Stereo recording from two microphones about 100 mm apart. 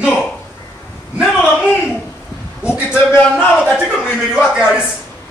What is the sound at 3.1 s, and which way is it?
Speech, 20° left (ahead or behind).